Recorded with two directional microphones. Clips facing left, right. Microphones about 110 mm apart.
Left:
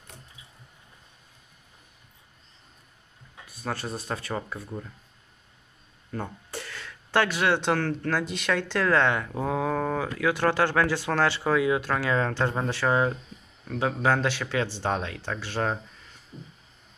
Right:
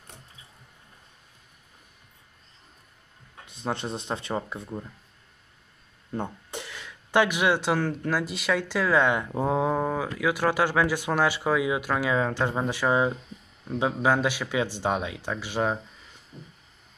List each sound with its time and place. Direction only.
3.4 s speech: 20° right (ahead or behind)
6.1 s speech: 20° right (ahead or behind)